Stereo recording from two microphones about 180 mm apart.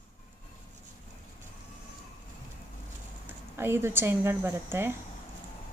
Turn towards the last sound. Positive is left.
turn(degrees=-10)  # may be behind; listen again after turning